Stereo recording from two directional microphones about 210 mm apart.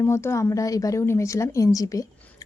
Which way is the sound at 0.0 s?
10° left (ahead or behind).